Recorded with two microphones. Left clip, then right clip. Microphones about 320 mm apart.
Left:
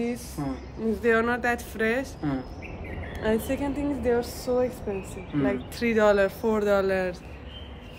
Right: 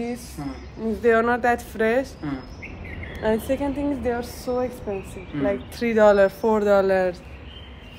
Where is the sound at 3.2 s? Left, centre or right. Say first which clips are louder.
Right 4 dB; centre.